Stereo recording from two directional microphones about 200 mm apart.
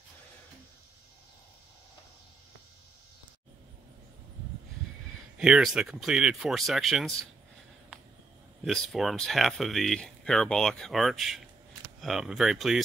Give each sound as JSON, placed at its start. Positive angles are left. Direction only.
{"t": 5.4, "sound": "speech", "side_deg": 0}
{"t": 8.6, "sound": "speech", "side_deg": 0}